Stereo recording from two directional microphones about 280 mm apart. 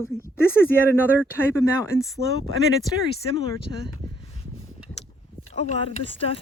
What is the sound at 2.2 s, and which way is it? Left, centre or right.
Speech, right.